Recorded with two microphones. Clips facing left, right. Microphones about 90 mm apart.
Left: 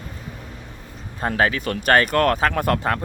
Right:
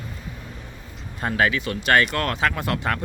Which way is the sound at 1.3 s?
40° left (ahead or behind).